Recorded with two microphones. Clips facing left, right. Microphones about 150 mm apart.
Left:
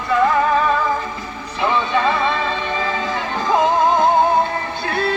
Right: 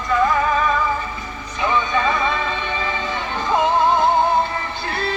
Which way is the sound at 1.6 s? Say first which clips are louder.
Left 2 dB; 30° left (ahead or behind).